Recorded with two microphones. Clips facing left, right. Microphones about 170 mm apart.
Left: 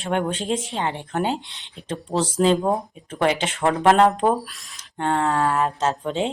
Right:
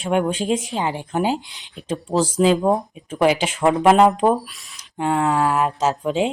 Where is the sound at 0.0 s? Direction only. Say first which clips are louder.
Right 4 dB; 10° right (ahead or behind).